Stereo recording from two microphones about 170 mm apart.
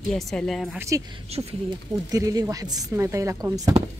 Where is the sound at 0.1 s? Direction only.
5° left (ahead or behind).